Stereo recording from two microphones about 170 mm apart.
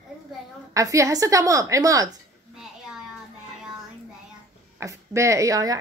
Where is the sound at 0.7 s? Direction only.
20° right (ahead or behind).